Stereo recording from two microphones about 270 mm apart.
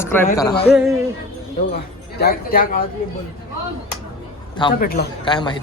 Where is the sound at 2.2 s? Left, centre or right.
Left.